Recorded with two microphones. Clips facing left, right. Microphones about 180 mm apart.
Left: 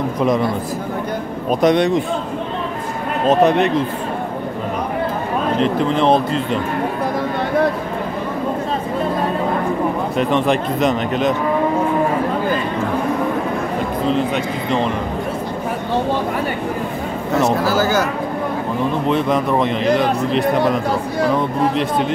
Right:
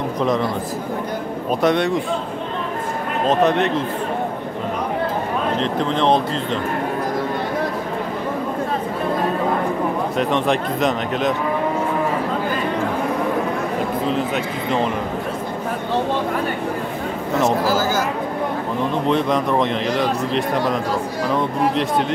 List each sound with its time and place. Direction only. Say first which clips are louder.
1.5 s speech: left 4 dB; 15° left (ahead or behind)
3.3 s speech: left 3 dB; 10° left (ahead or behind)
5.6 s speech: left 5 dB; 5° left (ahead or behind)
10.1 s a man's voice: left 3 dB; centre (ahead or behind)
14.1 s a man's voice: left 3 dB; centre (ahead or behind)
17.6 s speech: left 3 dB; 65° left (ahead or behind)
19.0 s a man's voice: left 1 dB; 5° left (ahead or behind)